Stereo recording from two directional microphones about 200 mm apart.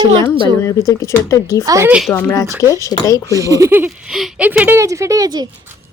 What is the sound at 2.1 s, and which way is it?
Speech, 15° left (ahead or behind).